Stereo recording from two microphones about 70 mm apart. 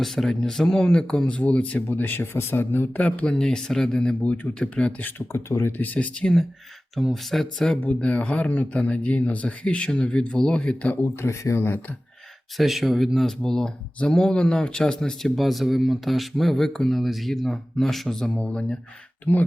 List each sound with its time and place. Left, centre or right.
0.0 s speech: centre
1.9 s speech: left
5.3 s speech: left
5.7 s speech: left
6.9 s speech: centre
7.8 s speech: centre
10.9 s speech: left
12.5 s speech: centre
18.3 s speech: centre